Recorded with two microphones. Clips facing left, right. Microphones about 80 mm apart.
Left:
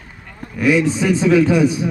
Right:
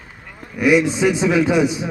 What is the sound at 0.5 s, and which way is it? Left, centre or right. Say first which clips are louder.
A man's voice: even; centre.